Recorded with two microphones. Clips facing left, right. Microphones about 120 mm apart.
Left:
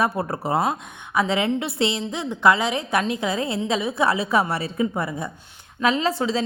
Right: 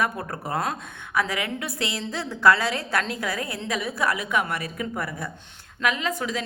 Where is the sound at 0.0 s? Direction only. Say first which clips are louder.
Left 4 dB; 25° left (ahead or behind).